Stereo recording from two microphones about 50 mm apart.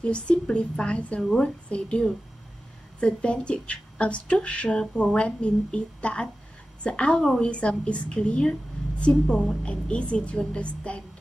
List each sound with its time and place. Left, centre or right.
0.0 s a woman's voice: left
7.2 s a woman's voice: centre
7.4 s a woman's voice: left